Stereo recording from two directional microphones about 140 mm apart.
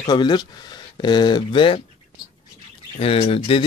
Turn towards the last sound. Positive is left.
turn(degrees=40)  # may be behind; listen again after turning